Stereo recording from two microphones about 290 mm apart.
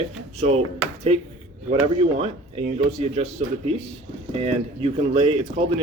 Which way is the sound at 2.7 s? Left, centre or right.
Right.